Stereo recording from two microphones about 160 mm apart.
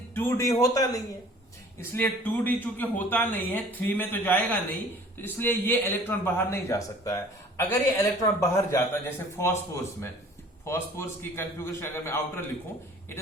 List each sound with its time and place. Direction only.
0.1 s a man's voice: 15° left (ahead or behind)